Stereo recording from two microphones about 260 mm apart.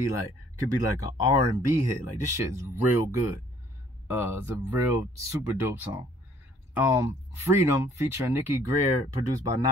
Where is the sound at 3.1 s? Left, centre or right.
Centre.